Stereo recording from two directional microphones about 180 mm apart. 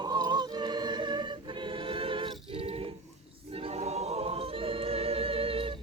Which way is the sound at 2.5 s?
30° right (ahead or behind).